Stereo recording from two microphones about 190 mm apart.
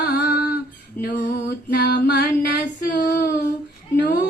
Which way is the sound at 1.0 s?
60° left (ahead or behind).